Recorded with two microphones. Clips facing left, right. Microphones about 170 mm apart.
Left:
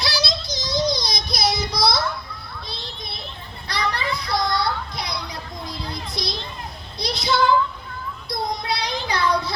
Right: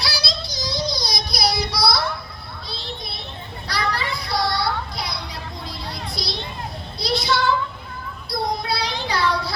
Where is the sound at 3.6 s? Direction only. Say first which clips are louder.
Even; 20° left (ahead or behind).